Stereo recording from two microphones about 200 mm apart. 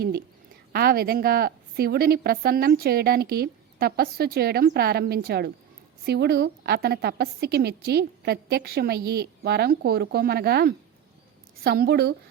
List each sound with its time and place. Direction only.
0.7 s a woman's voice: 50° right (ahead or behind)